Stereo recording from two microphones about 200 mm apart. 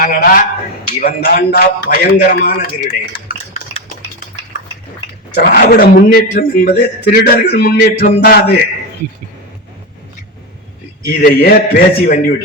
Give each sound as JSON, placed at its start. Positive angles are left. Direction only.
{"t": 0.0, "sound": "a man's voice", "side_deg": 45}
{"t": 3.5, "sound": "stir", "side_deg": 30}
{"t": 5.4, "sound": "a man's voice", "side_deg": 50}
{"t": 11.0, "sound": "a man's voice", "side_deg": 50}